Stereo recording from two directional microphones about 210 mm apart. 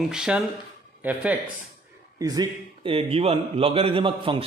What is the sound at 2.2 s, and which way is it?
A man's voice, 20° right (ahead or behind).